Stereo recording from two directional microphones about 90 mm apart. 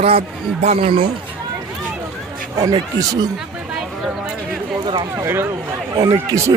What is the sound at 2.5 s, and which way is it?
Speech, 45° right (ahead or behind).